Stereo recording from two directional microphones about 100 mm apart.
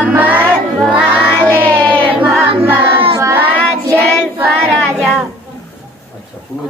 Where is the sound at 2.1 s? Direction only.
20° right (ahead or behind).